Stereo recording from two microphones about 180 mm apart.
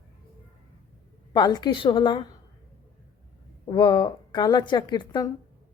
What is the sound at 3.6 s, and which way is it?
Speech, 25° left (ahead or behind).